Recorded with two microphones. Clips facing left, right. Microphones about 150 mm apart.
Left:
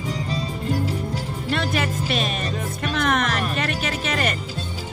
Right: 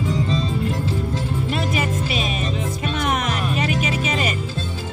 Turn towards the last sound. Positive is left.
turn(degrees=0)  # may be behind; listen again after turning